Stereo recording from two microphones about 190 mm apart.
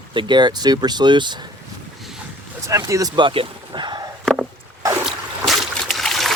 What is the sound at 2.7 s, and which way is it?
Speech, 15° right (ahead or behind).